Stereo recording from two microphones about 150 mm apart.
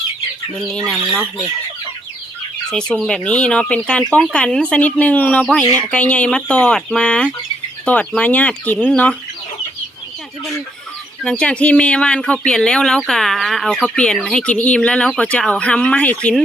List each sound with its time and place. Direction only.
0.6 s speech: 5° left (ahead or behind)
2.6 s speech: 5° left (ahead or behind)
5.6 s speech: 20° right (ahead or behind)
5.9 s speech: 10° left (ahead or behind)
11.2 s speech: 5° left (ahead or behind)